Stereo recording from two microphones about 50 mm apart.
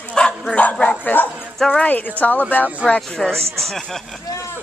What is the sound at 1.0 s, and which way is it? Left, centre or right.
Speech, left.